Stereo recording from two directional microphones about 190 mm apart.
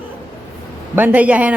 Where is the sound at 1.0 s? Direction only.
10° right (ahead or behind).